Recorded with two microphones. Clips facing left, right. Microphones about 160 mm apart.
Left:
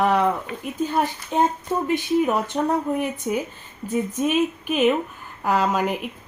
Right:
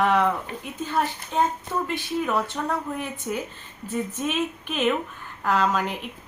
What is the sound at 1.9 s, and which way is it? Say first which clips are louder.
A woman's voice: left 6 dB; 20° left (ahead or behind).